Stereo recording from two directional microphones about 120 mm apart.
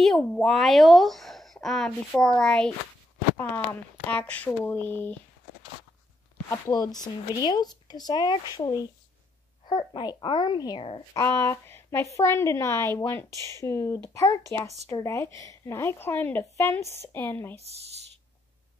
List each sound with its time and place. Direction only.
0.0 s speech: centre (ahead or behind)
4.1 s speech: 10° left (ahead or behind)
6.5 s speech: 30° left (ahead or behind)
11.1 s speech: 25° left (ahead or behind)